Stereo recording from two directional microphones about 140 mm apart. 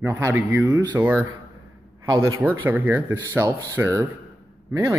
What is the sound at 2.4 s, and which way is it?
Speech, 15° right (ahead or behind).